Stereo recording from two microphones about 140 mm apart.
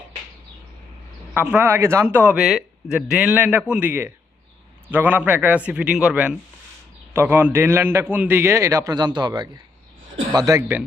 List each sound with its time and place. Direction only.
1.3 s a man's voice: 15° right (ahead or behind)
2.4 s a man's voice: centre (ahead or behind); by 10.6 s 25° right (ahead or behind)
10.6 s a man's voice: 15° right (ahead or behind)